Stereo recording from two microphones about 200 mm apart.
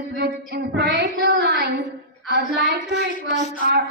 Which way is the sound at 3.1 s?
40° left (ahead or behind).